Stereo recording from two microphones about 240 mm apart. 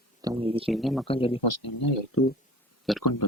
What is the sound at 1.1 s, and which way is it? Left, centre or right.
Speech, left.